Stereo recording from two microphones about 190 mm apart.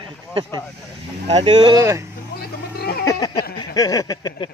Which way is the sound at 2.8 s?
55° left (ahead or behind).